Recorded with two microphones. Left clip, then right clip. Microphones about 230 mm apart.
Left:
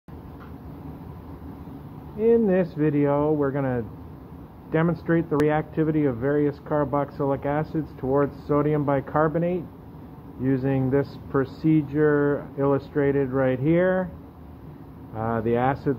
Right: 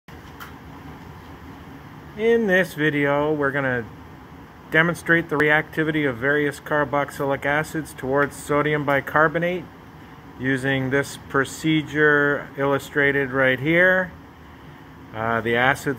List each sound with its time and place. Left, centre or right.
2.1 s speech: centre
7.7 s speech: centre
8.5 s speech: centre
15.1 s speech: centre